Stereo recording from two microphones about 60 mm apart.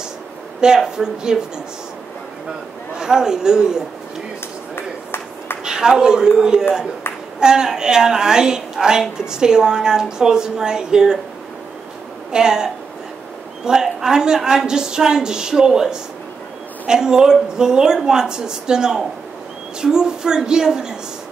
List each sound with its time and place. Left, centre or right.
0.6 s a woman's voice: centre
3.0 s a woman's voice: centre
4.7 s a sound: left
5.6 s a man's voice: centre
12.3 s a woman's voice: centre
13.8 s a woman's voice: centre